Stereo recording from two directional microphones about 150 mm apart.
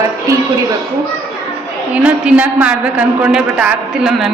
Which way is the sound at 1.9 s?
10° right (ahead or behind).